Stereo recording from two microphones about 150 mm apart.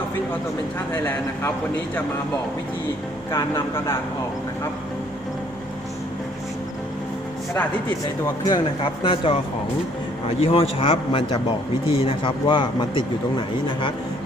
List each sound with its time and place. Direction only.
3.3 s speech: 15° left (ahead or behind)
8.2 s speech: 25° left (ahead or behind)
10.4 s speech: 40° left (ahead or behind)